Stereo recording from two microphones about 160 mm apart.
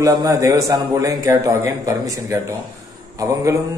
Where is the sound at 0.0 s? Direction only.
20° right (ahead or behind).